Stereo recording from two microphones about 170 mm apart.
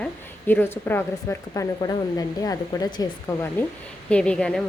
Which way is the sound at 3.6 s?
10° left (ahead or behind).